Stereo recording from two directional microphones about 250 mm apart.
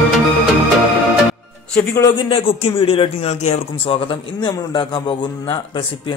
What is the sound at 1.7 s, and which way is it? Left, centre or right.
A man's voice, centre.